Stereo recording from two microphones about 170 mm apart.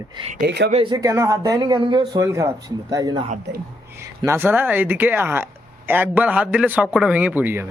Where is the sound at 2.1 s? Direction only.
20° right (ahead or behind).